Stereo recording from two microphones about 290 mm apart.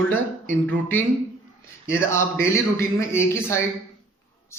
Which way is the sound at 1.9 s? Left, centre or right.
Centre.